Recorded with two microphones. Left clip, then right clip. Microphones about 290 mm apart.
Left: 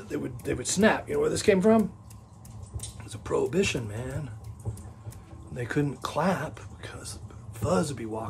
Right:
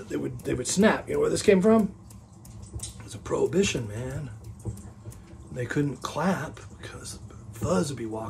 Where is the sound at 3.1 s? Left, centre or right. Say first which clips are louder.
Right 1 dB; centre.